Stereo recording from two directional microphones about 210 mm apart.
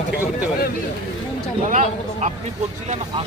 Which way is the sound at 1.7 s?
35° right (ahead or behind).